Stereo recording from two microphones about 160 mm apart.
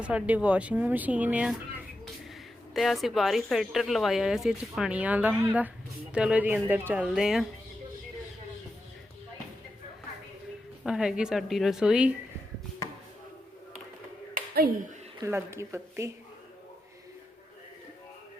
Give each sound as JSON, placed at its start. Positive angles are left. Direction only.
{"t": 0.0, "sound": "speech", "side_deg": -10}
{"t": 2.7, "sound": "speech", "side_deg": 0}
{"t": 10.8, "sound": "speech", "side_deg": -5}
{"t": 14.3, "sound": "finger snapping", "side_deg": -65}
{"t": 15.2, "sound": "speech", "side_deg": -15}